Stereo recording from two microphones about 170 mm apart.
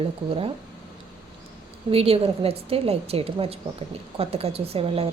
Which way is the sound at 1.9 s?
35° right (ahead or behind).